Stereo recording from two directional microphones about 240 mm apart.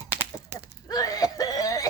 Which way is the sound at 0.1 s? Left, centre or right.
Centre.